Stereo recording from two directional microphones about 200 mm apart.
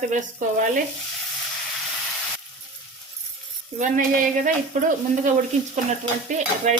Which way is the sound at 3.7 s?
40° right (ahead or behind).